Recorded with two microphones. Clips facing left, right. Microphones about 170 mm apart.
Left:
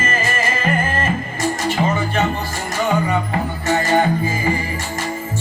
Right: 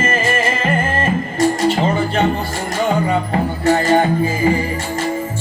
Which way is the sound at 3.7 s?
30° right (ahead or behind).